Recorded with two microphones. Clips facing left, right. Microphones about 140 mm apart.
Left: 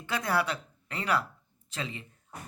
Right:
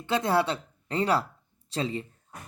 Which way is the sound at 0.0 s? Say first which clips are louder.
Right 5 dB; 25° right (ahead or behind).